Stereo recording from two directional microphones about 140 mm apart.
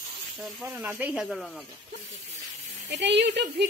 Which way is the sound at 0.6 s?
10° right (ahead or behind).